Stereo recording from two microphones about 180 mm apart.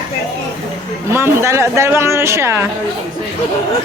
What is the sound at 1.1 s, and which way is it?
Speech, 15° right (ahead or behind).